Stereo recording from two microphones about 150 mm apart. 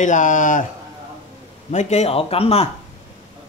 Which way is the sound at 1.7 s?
50° left (ahead or behind).